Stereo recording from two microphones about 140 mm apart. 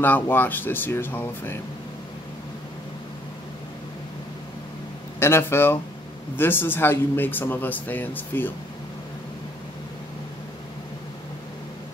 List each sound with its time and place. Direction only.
0.0 s speech: 15° left (ahead or behind)
5.2 s speech: 15° left (ahead or behind)